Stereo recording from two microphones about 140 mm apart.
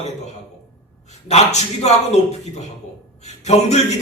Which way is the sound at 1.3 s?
50° left (ahead or behind).